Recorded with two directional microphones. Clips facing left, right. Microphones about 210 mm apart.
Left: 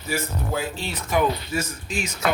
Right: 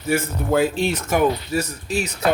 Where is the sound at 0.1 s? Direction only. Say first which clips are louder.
Right 7 dB; 55° right (ahead or behind).